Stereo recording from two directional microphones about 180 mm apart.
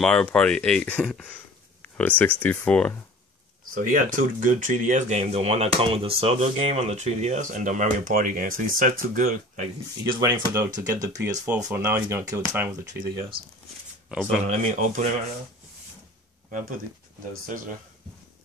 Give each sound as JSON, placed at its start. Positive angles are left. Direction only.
{"t": 0.0, "sound": "speech", "side_deg": 5}
{"t": 3.7, "sound": "speech", "side_deg": -50}
{"t": 10.0, "sound": "speech", "side_deg": -25}
{"t": 10.5, "sound": "speech", "side_deg": -15}
{"t": 13.1, "sound": "speech", "side_deg": -25}
{"t": 14.0, "sound": "speech", "side_deg": -5}
{"t": 14.4, "sound": "speech", "side_deg": -40}